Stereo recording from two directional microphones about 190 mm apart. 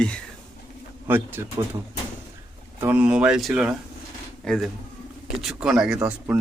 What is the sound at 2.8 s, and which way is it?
Speech, 10° right (ahead or behind).